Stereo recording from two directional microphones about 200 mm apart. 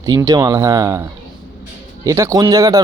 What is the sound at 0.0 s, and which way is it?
Speech, 20° right (ahead or behind).